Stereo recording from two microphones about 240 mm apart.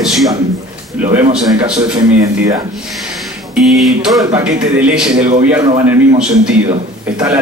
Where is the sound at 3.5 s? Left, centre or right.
Centre.